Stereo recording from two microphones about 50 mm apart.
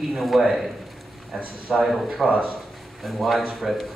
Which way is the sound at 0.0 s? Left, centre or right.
Centre.